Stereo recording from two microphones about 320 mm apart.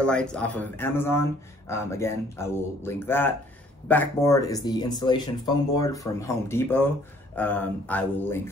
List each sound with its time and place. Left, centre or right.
0.0 s speech: centre